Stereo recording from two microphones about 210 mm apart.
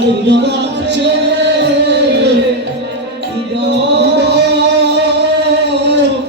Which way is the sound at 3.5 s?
55° right (ahead or behind).